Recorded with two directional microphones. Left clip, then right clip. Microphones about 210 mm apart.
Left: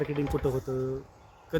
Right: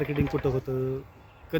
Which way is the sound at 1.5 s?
10° right (ahead or behind).